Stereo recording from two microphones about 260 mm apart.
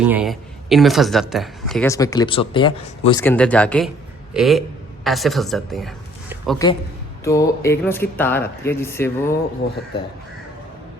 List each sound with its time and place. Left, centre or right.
0.0 s speech: centre
1.9 s speech: centre
3.2 s speech: centre
7.3 s speech: centre